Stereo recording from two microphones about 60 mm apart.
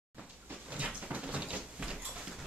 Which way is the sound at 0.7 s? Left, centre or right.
Right.